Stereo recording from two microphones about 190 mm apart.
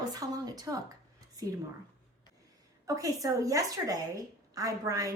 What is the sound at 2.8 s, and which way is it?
A woman's voice, 20° right (ahead or behind).